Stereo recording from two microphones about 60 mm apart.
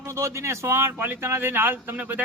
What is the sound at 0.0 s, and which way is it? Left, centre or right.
A man's voice, right.